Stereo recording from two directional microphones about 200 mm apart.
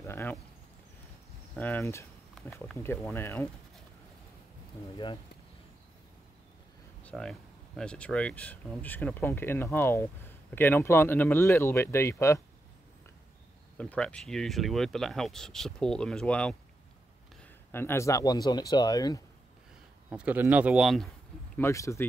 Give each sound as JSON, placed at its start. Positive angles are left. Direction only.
{"t": 0.0, "sound": "speech", "side_deg": 10}
{"t": 1.5, "sound": "speech", "side_deg": 10}
{"t": 4.9, "sound": "speech", "side_deg": 25}
{"t": 7.0, "sound": "speech", "side_deg": 5}
{"t": 13.7, "sound": "speech", "side_deg": 5}
{"t": 20.1, "sound": "a man's voice", "side_deg": -10}
{"t": 21.5, "sound": "speech", "side_deg": 15}